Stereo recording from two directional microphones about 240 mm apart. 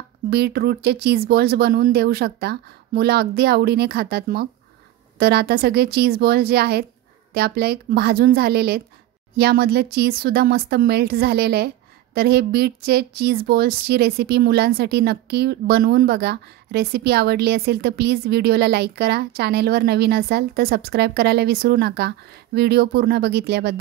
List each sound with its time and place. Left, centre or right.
0.3 s speech: right